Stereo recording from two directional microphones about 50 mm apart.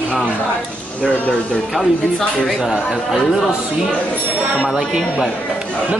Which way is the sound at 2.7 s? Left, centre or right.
Centre.